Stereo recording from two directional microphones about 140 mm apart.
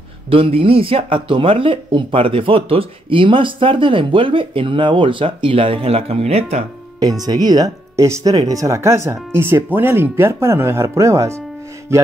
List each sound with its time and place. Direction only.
0.3 s speech: 40° right (ahead or behind)
7.0 s speech: 25° right (ahead or behind)